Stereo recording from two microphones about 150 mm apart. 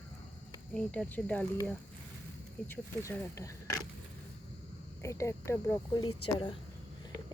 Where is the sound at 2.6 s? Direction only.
10° left (ahead or behind).